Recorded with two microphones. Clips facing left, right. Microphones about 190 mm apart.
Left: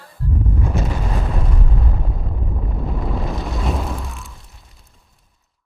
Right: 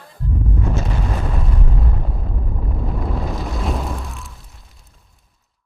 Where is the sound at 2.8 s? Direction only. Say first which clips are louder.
Even; centre (ahead or behind).